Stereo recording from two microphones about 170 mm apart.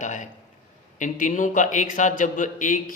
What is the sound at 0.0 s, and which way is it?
Speech, 45° left (ahead or behind).